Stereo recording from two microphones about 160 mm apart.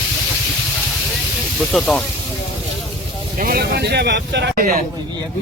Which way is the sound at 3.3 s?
65° right (ahead or behind).